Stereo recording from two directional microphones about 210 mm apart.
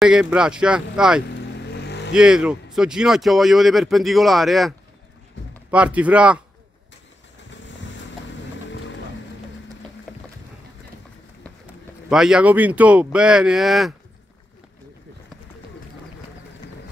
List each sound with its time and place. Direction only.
0.0 s speech: 5° right (ahead or behind)
1.3 s vehicle: 55° left (ahead or behind)
2.1 s speech: 5° right (ahead or behind)
8.6 s boat: 60° left (ahead or behind)
11.6 s speech: 5° right (ahead or behind)